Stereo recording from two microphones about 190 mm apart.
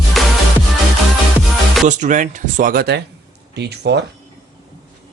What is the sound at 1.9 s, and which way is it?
Speech, 40° right (ahead or behind).